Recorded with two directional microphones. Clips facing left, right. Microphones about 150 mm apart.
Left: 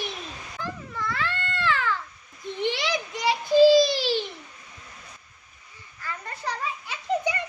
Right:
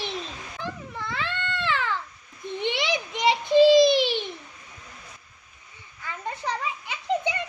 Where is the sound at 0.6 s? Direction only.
20° right (ahead or behind).